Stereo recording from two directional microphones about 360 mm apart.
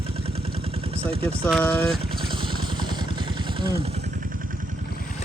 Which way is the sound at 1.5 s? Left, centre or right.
Centre.